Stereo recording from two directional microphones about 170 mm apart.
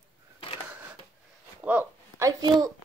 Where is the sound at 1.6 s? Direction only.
10° right (ahead or behind).